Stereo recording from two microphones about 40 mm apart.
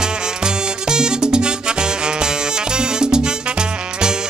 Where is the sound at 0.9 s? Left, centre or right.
Centre.